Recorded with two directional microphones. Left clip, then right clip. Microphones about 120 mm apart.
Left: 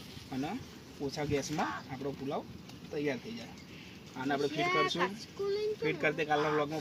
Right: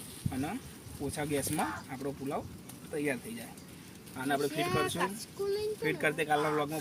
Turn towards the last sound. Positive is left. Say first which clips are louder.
# right 1 dB
turn(degrees=-10)  # may be behind; listen again after turning